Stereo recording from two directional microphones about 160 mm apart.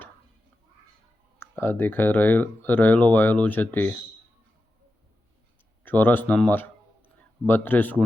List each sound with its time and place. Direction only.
1.4 s speech: 15° left (ahead or behind)
5.8 s speech: 10° left (ahead or behind)